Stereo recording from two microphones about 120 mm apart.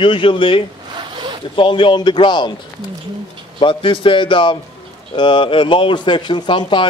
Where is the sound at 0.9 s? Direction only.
40° right (ahead or behind).